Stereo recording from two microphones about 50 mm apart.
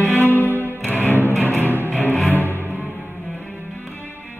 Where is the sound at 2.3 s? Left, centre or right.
Right.